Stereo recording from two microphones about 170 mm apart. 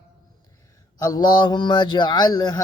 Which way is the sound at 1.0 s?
25° left (ahead or behind).